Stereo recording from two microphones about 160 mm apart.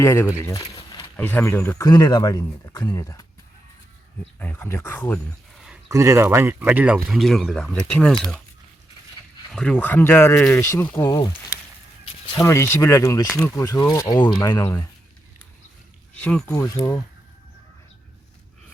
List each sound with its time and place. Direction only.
0.0 s speech: 15° left (ahead or behind)
0.6 s a sound: 25° left (ahead or behind)
1.1 s speech: 10° left (ahead or behind)
4.4 s speech: 10° left (ahead or behind)
5.5 s a sound: 5° right (ahead or behind)
5.9 s speech: 20° right (ahead or behind); by 8.4 s 5° left (ahead or behind)
9.5 s speech: 5° left (ahead or behind)
12.4 s speech: 15° left (ahead or behind)
16.1 s speech: 10° left (ahead or behind)
16.5 s speech: 20° left (ahead or behind)